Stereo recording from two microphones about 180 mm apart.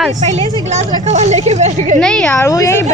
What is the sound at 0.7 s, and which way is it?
A woman's voice, 40° right (ahead or behind).